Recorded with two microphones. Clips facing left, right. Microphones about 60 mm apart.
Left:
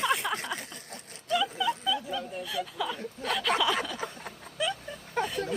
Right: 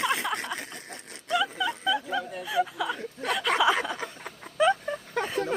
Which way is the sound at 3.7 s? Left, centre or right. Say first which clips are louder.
Right 4 dB; right.